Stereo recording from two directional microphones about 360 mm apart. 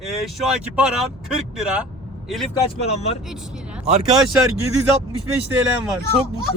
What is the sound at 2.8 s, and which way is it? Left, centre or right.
Speech, centre.